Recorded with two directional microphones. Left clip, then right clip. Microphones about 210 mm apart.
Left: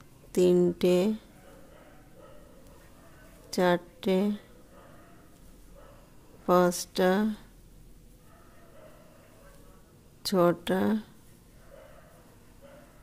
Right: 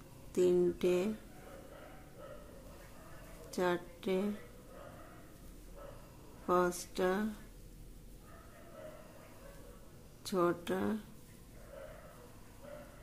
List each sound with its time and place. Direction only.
0.3 s speech: 45° left (ahead or behind)
3.4 s a woman's voice: 40° left (ahead or behind)
6.4 s speech: 45° left (ahead or behind)
10.2 s speech: 45° left (ahead or behind)